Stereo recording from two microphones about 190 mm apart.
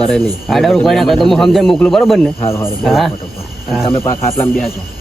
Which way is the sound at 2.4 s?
15° left (ahead or behind).